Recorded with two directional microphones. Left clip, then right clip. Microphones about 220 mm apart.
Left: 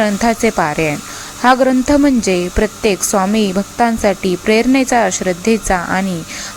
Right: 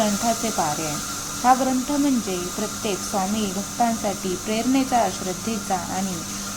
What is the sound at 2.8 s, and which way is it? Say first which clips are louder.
A woman's voice: left 9 dB; 25° left (ahead or behind).